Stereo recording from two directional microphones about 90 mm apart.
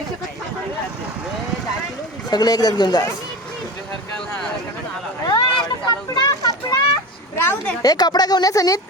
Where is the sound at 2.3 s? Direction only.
45° left (ahead or behind).